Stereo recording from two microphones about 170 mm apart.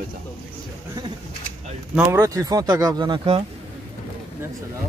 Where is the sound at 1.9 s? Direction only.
15° right (ahead or behind); by 3.4 s 30° right (ahead or behind).